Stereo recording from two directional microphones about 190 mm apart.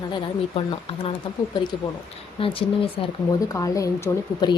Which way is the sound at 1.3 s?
25° left (ahead or behind).